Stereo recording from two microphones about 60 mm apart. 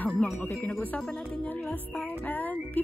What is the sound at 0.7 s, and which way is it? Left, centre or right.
Speech, centre.